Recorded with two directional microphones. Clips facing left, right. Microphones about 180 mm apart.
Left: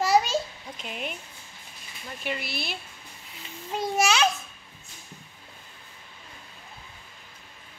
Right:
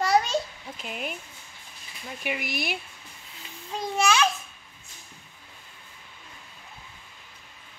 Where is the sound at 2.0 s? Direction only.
10° right (ahead or behind).